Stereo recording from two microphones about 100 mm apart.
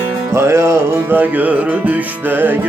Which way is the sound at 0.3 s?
25° right (ahead or behind).